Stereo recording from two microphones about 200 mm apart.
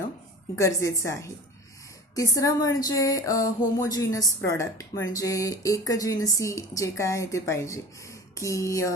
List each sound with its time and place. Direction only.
0.5 s a woman's voice: 15° left (ahead or behind)